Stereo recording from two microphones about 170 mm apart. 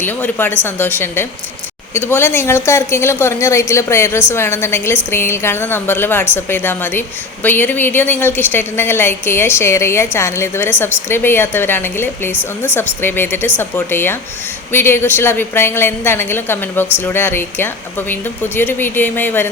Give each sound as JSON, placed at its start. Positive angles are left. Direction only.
{"t": 0.0, "sound": "a woman's voice", "side_deg": 10}